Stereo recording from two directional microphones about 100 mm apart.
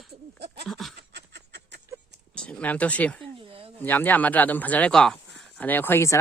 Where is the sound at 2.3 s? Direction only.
10° left (ahead or behind).